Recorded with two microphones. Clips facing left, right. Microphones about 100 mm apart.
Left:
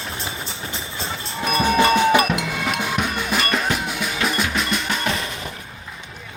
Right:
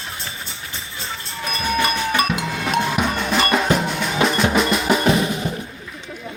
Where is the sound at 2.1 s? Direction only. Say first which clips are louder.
Left 3 dB; 20° left (ahead or behind).